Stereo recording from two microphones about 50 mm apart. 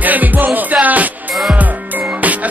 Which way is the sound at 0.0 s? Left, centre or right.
Right.